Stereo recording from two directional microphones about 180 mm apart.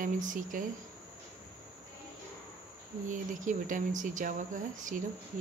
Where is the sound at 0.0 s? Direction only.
45° right (ahead or behind).